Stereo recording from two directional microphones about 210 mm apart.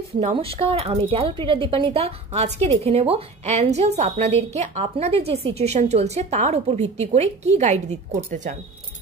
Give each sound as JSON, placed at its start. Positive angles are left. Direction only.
{"t": 0.2, "sound": "speech", "side_deg": -30}